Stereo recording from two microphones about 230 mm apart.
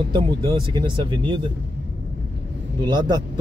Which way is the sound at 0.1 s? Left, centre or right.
Right.